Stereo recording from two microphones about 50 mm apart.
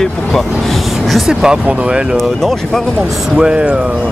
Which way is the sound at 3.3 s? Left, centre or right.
Centre.